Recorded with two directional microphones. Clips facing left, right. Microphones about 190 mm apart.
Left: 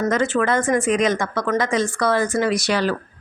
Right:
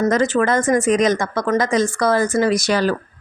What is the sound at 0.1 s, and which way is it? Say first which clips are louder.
Speech: right 2 dB; 40° right (ahead or behind).